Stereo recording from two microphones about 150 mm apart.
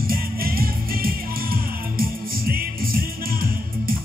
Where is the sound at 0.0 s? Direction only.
75° right (ahead or behind).